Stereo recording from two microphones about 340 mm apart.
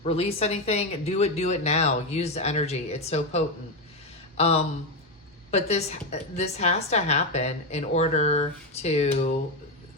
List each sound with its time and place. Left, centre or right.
0.0 s a woman's voice: centre